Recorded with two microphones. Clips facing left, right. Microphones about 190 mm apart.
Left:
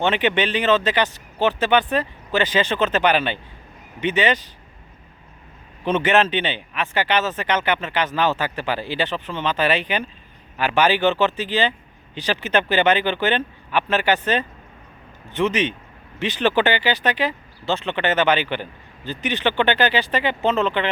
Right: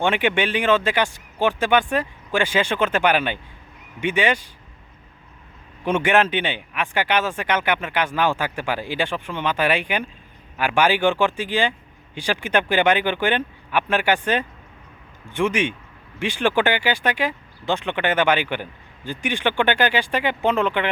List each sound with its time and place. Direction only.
0.0 s speech: 10° right (ahead or behind)
5.8 s speech: 10° right (ahead or behind)